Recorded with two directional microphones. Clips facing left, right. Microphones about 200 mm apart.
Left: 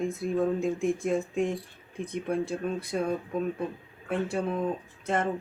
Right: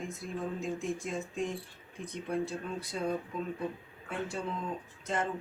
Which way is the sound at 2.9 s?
60° left (ahead or behind).